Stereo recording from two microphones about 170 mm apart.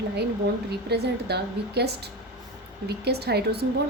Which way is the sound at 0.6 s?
70° right (ahead or behind).